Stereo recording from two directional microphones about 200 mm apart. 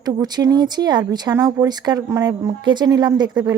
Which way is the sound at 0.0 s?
20° right (ahead or behind).